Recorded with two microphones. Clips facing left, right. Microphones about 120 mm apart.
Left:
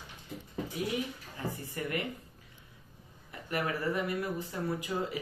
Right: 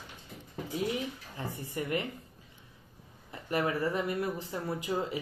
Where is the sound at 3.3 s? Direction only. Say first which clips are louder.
Right 3 dB; 25° right (ahead or behind).